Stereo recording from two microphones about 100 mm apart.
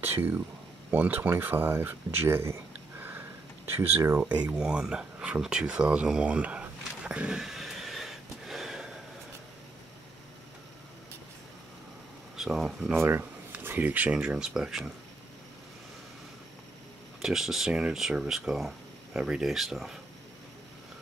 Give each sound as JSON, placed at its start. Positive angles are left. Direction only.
{"t": 0.0, "sound": "speech", "side_deg": -20}
{"t": 3.0, "sound": "sniff", "side_deg": -20}
{"t": 3.7, "sound": "speech", "side_deg": -20}
{"t": 4.6, "sound": "a sound", "side_deg": -5}
{"t": 12.4, "sound": "speech", "side_deg": -5}
{"t": 12.9, "sound": "speech", "side_deg": -25}
{"t": 17.2, "sound": "speech", "side_deg": -5}